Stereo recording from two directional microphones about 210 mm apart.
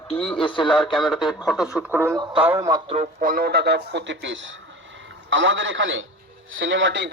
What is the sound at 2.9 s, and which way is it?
A man's voice, 35° right (ahead or behind).